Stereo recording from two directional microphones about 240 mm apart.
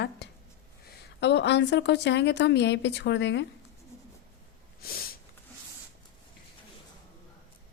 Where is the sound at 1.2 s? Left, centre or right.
Left.